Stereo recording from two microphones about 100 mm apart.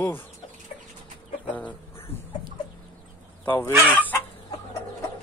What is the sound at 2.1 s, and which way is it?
Chicken, 25° left (ahead or behind).